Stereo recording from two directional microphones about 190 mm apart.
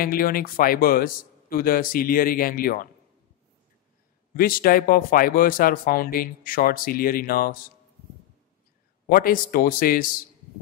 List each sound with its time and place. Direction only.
0.0 s speech: 50° left (ahead or behind)
4.4 s speech: 50° left (ahead or behind)
9.1 s speech: 50° left (ahead or behind)